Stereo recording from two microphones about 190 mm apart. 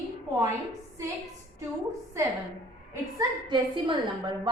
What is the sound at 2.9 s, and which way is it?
A woman's voice, 20° right (ahead or behind).